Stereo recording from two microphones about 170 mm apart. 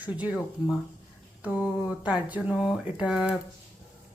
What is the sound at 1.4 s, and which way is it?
A woman's voice, 10° right (ahead or behind).